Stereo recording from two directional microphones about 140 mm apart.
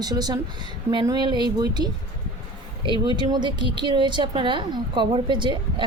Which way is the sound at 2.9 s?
35° right (ahead or behind).